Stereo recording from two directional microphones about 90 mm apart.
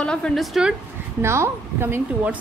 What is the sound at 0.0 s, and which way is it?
Speech, 10° left (ahead or behind).